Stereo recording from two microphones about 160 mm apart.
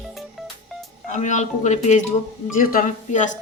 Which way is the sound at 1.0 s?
50° left (ahead or behind).